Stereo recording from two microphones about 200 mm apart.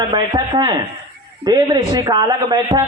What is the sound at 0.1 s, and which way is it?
Speech, 20° right (ahead or behind).